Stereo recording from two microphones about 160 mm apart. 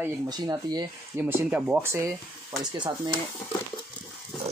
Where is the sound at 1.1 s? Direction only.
10° right (ahead or behind).